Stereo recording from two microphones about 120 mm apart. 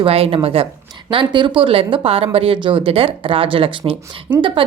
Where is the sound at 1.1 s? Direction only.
40° right (ahead or behind).